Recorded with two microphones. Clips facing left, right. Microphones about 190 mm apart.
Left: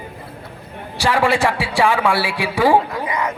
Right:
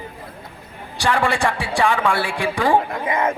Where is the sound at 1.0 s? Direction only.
10° left (ahead or behind).